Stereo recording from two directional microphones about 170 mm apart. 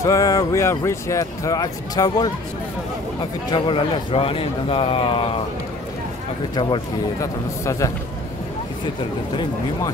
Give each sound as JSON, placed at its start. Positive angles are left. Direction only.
{"t": 0.0, "sound": "speech", "side_deg": 20}
{"t": 3.5, "sound": "a man's voice", "side_deg": 30}
{"t": 6.5, "sound": "speech", "side_deg": 25}